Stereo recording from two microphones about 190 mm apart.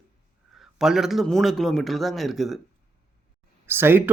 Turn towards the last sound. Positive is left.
turn(degrees=-10)  # may be behind; listen again after turning